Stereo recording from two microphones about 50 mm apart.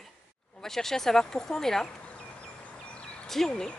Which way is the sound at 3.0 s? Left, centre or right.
Left.